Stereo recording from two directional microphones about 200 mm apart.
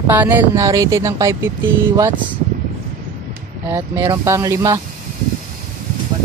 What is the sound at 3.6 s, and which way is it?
Speech, 10° right (ahead or behind).